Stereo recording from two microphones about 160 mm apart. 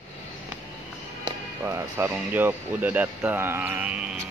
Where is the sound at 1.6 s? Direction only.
15° right (ahead or behind).